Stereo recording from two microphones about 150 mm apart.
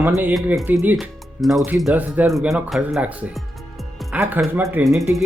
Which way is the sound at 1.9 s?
10° right (ahead or behind).